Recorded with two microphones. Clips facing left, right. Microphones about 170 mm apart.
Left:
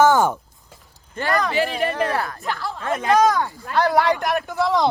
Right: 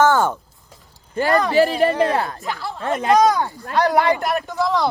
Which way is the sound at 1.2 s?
35° right (ahead or behind).